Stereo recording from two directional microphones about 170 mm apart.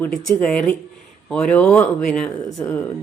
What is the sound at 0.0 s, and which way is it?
Speech, 10° left (ahead or behind).